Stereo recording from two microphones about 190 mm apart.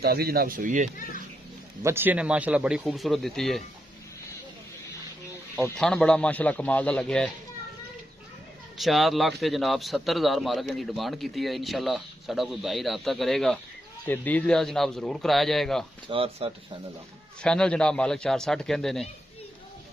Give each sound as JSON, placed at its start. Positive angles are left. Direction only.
{"t": 0.0, "sound": "speech", "side_deg": -55}
{"t": 1.8, "sound": "speech", "side_deg": -15}
{"t": 5.8, "sound": "a man's voice", "side_deg": 5}
{"t": 8.7, "sound": "speech", "side_deg": 0}
{"t": 16.1, "sound": "speech", "side_deg": -30}
{"t": 17.4, "sound": "speech", "side_deg": 5}